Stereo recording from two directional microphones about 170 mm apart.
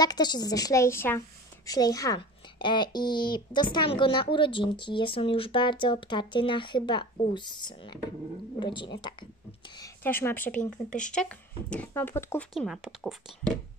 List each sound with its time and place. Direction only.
0.0 s speech: 25° left (ahead or behind)
10.0 s speech: 10° left (ahead or behind)
12.5 s speech: centre (ahead or behind)